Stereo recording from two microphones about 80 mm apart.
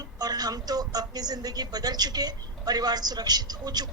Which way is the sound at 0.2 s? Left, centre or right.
Right.